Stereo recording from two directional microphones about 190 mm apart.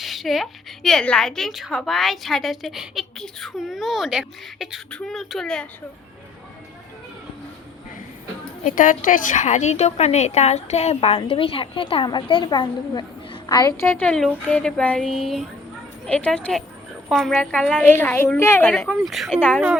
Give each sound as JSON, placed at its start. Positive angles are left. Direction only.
{"t": 0.0, "sound": "a woman's voice", "side_deg": 0}
{"t": 8.6, "sound": "a woman's voice", "side_deg": 45}
{"t": 19.0, "sound": "a woman's voice", "side_deg": 0}